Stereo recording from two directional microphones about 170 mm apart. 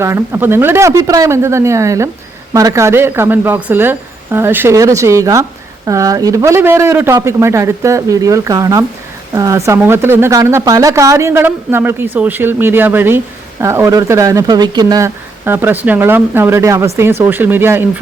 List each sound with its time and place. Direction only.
0.0 s speech: 15° right (ahead or behind)